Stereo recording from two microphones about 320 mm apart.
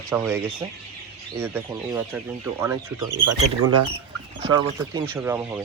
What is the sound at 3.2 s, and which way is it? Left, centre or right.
Speech, right.